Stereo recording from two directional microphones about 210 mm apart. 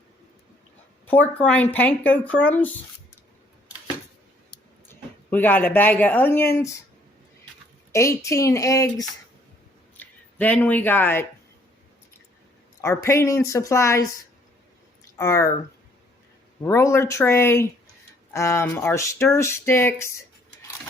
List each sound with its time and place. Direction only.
1.0 s speech: 10° left (ahead or behind)
4.9 s speech: 10° left (ahead or behind)
7.9 s speech: 15° left (ahead or behind)
12.8 s speech: 15° left (ahead or behind)
15.2 s speech: 15° left (ahead or behind)
16.6 s speech: 15° left (ahead or behind)